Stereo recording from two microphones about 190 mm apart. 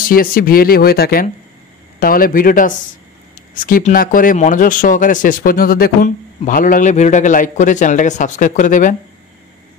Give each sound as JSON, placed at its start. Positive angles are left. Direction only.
{"t": 0.1, "sound": "speech", "side_deg": 50}